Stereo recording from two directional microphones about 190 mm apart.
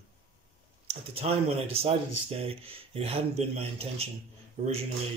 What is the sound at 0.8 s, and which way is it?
Speech, 30° right (ahead or behind).